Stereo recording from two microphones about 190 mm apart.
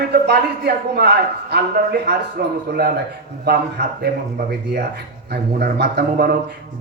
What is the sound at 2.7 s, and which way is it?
Speech, 60° right (ahead or behind).